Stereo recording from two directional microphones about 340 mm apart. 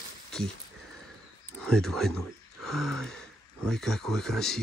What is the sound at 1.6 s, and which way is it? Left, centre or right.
Speech, centre.